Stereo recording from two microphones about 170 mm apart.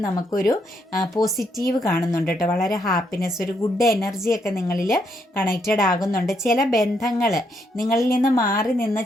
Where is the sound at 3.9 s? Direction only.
Centre (ahead or behind).